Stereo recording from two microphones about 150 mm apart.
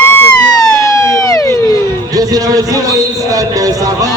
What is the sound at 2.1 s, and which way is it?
Music, 25° right (ahead or behind).